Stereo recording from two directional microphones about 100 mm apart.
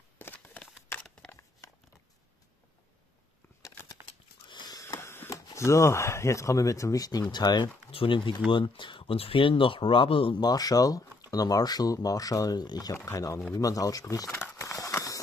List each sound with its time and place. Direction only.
0.2 s a sound: 15° left (ahead or behind)
4.5 s sniff: 45° left (ahead or behind)
5.0 s a sound: 25° left (ahead or behind)
5.3 s speech: 30° left (ahead or behind); by 7.7 s 45° left (ahead or behind)
7.9 s speech: 60° left (ahead or behind)
10.4 s speech: 40° left (ahead or behind)
13.6 s crumpling: 35° left (ahead or behind)